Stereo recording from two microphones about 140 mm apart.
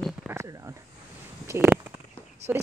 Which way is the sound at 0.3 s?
5° right (ahead or behind).